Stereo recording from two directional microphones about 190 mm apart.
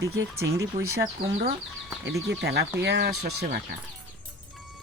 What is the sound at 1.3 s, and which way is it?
Speech, 35° right (ahead or behind).